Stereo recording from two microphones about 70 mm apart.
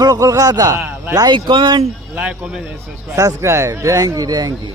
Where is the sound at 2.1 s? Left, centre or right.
Right.